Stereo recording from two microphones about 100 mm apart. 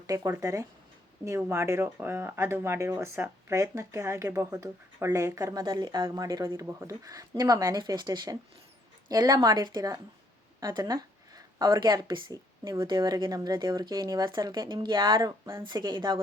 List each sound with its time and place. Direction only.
0.1 s speech: 30° right (ahead or behind)
12.6 s speech: 30° right (ahead or behind)
12.9 s speech: 45° right (ahead or behind)